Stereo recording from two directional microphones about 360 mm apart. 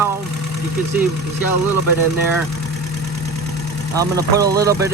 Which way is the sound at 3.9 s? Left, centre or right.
Centre.